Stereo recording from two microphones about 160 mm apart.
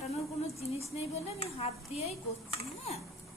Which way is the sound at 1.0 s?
40° left (ahead or behind).